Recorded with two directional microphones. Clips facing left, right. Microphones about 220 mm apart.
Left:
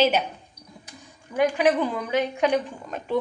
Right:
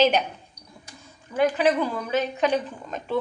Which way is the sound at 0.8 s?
10° left (ahead or behind).